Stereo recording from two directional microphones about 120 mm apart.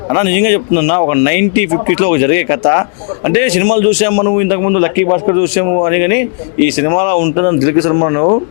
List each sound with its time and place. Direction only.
0.1 s a man's voice: 15° left (ahead or behind)